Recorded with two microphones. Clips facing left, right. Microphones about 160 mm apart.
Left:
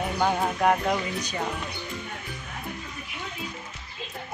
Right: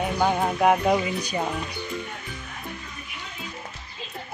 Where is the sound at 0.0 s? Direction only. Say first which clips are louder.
Right 2 dB; 5° right (ahead or behind).